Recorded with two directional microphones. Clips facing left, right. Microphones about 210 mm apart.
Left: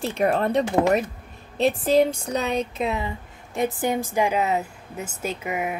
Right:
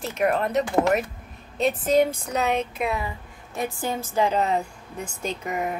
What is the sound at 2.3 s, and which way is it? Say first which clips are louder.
A woman's voice: even; 30° left (ahead or behind).